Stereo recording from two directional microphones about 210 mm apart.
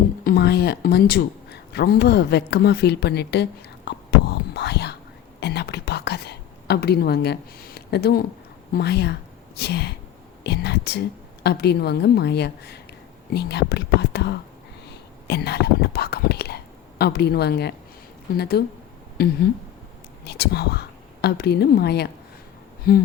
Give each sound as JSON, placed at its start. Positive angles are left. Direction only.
{"t": 0.3, "sound": "speech", "side_deg": 50}
{"t": 3.8, "sound": "whispering", "side_deg": 50}
{"t": 8.7, "sound": "a woman's voice", "side_deg": 50}
{"t": 10.4, "sound": "whispering", "side_deg": 50}
{"t": 11.4, "sound": "a woman's voice", "side_deg": 50}